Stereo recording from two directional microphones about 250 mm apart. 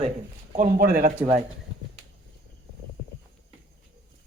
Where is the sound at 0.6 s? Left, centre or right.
Right.